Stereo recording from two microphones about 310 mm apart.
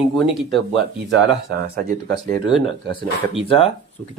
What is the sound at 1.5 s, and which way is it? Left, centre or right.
Speech, right.